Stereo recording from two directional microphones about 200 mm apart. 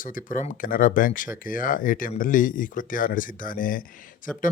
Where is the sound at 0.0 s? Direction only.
40° left (ahead or behind).